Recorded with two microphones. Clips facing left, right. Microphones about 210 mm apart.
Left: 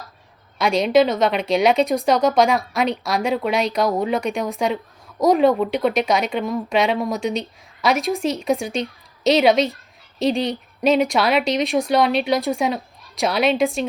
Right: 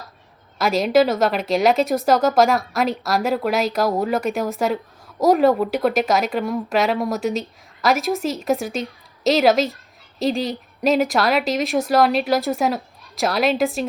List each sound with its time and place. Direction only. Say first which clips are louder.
0.6 s speech: even; 5° right (ahead or behind)